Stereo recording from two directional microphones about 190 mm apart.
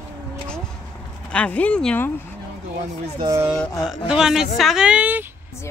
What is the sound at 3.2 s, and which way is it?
Music, 20° right (ahead or behind).